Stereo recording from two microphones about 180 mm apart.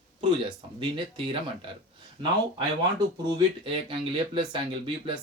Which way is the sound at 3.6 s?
30° right (ahead or behind).